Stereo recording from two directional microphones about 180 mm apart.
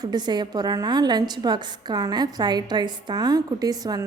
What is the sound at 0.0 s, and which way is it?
A woman's voice, 25° right (ahead or behind).